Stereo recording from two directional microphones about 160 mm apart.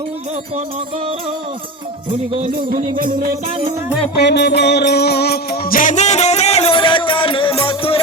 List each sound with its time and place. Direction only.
2.4 s music: 55° right (ahead or behind)
4.2 s music: 90° left; by 8.0 s 35° left (ahead or behind)